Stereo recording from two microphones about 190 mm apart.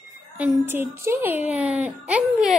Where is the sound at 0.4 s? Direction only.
10° right (ahead or behind).